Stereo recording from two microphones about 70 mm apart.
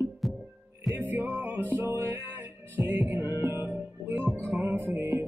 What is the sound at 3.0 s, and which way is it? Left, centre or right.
Music, right.